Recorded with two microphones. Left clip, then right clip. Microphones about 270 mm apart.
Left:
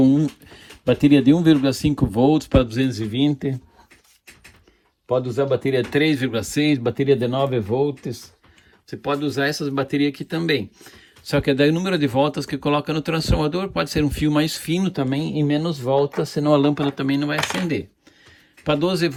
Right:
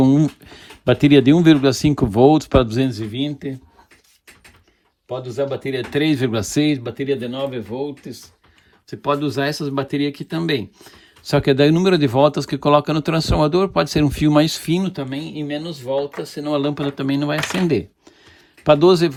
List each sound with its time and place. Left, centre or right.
0.0 s speech: right; by 3.5 s centre
5.0 s speech: centre
6.7 s speech: centre
8.9 s speech: centre
11.2 s speech: centre
14.8 s speech: centre